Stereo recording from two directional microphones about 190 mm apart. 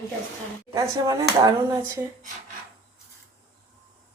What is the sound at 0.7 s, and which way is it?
Speech, 20° right (ahead or behind).